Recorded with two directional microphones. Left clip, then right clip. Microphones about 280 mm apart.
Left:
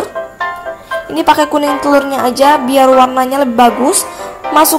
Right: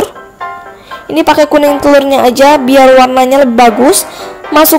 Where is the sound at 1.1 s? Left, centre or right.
Centre.